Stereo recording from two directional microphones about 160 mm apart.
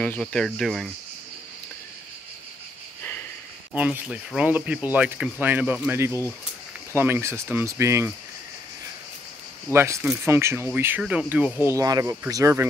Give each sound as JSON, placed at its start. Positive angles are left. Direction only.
{"t": 0.0, "sound": "speech", "side_deg": 5}
{"t": 3.0, "sound": "a sound", "side_deg": 10}
{"t": 3.7, "sound": "speech", "side_deg": -10}
{"t": 9.7, "sound": "speech", "side_deg": -15}